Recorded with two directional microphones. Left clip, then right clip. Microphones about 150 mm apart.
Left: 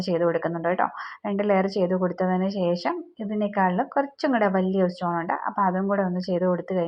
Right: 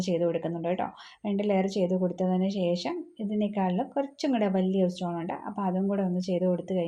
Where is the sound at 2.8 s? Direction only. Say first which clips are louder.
Left 5 dB; 10° right (ahead or behind).